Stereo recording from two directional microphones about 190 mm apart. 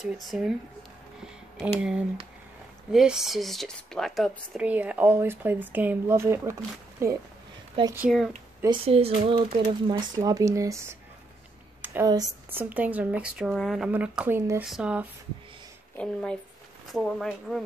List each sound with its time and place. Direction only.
0.0 s speech: centre (ahead or behind)
1.8 s speech: 5° right (ahead or behind)
7.9 s speech: 5° right (ahead or behind)
8.6 s speech: 30° right (ahead or behind)
11.8 s a sound: 10° right (ahead or behind)
12.1 s speech: 15° right (ahead or behind); by 17.6 s centre (ahead or behind)